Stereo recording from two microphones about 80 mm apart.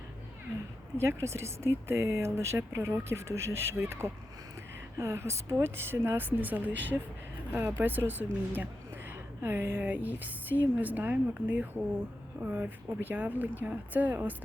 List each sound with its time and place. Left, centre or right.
0.9 s a woman's voice: right